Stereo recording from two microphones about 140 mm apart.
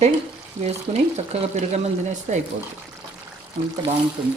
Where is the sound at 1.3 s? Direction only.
55° right (ahead or behind).